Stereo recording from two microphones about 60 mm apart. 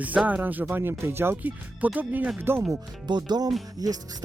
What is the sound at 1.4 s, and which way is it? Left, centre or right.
Speech, right.